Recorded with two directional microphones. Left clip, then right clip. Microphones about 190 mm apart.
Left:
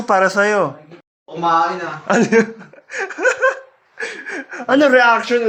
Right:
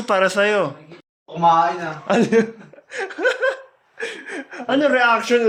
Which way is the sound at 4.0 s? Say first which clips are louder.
Left 3 dB; 5° right (ahead or behind).